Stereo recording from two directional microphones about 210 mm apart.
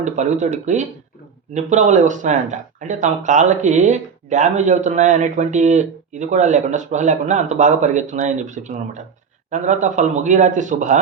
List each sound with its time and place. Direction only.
0.0 s speech: 35° right (ahead or behind)